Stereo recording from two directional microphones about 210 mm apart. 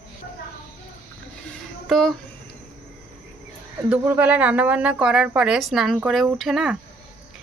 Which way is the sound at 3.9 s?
10° right (ahead or behind).